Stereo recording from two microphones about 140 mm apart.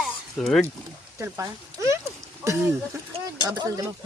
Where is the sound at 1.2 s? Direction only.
20° right (ahead or behind).